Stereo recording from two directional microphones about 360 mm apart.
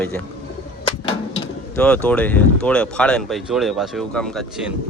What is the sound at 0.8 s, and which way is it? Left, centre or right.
Bird, centre.